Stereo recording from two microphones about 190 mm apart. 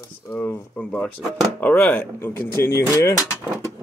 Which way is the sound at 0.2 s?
10° left (ahead or behind).